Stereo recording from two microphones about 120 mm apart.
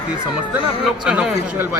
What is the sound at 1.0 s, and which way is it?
Speech, 10° right (ahead or behind).